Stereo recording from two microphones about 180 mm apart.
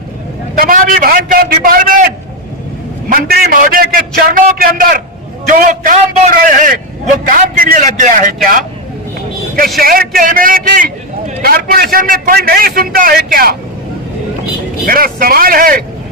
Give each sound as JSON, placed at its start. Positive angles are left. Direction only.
{"t": 0.6, "sound": "a man's voice", "side_deg": -50}
{"t": 3.1, "sound": "a man's voice", "side_deg": -55}
{"t": 9.8, "sound": "a man's voice", "side_deg": -55}
{"t": 14.8, "sound": "a man's voice", "side_deg": -55}